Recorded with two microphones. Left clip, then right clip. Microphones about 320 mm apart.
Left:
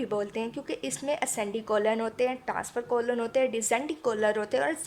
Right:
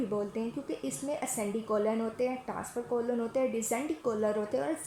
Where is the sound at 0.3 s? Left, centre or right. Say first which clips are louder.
Left 3 dB; left.